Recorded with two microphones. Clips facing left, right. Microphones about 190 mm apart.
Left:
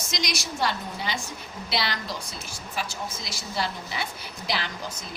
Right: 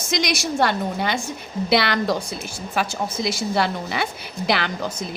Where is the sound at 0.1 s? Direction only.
60° right (ahead or behind).